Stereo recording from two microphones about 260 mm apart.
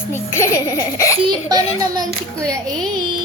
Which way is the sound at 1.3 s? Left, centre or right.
Centre.